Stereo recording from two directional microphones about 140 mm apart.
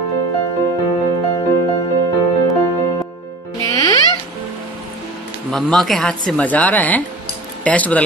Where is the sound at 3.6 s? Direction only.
25° left (ahead or behind).